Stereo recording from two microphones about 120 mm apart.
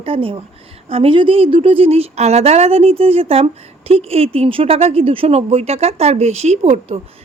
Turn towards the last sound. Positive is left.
turn(degrees=-65)  # may be behind; listen again after turning